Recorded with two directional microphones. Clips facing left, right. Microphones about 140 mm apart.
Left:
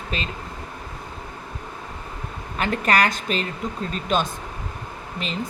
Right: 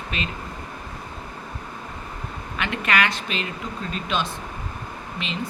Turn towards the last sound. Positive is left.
turn(degrees=40)  # may be behind; listen again after turning